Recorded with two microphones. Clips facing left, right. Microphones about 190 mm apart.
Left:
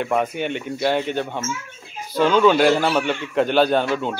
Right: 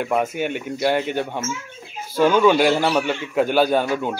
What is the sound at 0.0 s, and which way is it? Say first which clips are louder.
A man's voice: even; 5° right (ahead or behind).